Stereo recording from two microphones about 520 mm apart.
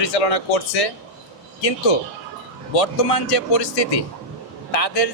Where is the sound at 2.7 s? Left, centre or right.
Left.